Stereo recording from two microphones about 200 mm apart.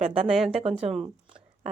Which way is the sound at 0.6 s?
30° right (ahead or behind).